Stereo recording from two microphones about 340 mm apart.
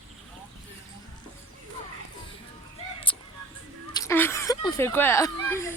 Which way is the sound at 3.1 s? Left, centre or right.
Centre.